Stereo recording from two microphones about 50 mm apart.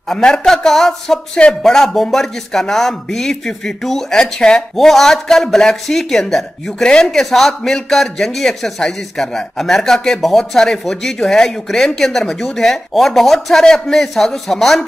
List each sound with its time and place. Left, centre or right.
0.1 s speech: centre